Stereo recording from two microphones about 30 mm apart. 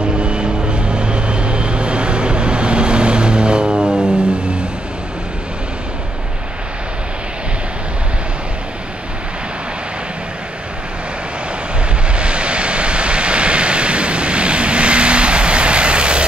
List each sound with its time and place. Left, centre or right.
0.2 s vehicle: right
12.1 s vehicle: right